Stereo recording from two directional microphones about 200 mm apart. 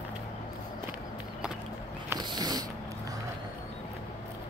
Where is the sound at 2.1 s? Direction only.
20° right (ahead or behind).